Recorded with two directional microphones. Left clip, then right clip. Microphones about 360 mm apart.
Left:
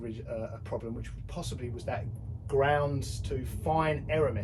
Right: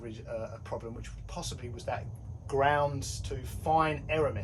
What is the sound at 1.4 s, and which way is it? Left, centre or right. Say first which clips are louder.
Speech: left 1 dB; centre.